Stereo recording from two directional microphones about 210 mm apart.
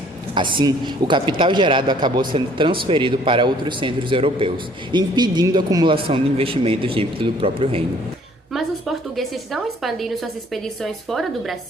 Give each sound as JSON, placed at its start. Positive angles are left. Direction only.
{"t": 0.3, "sound": "a man's voice", "side_deg": -25}
{"t": 8.5, "sound": "a woman's voice", "side_deg": 0}